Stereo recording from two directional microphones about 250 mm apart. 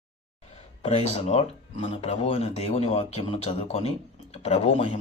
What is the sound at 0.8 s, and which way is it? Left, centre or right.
Speech, left.